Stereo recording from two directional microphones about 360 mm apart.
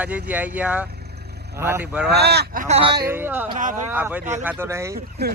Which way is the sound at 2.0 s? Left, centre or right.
Right.